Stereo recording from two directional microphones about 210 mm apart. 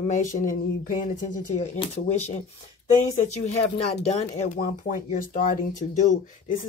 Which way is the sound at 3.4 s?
30° left (ahead or behind).